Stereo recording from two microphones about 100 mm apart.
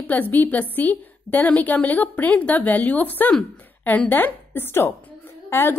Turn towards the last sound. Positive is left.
turn(degrees=20)  # may be behind; listen again after turning